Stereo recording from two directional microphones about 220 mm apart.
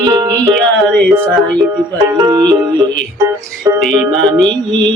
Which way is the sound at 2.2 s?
15° right (ahead or behind).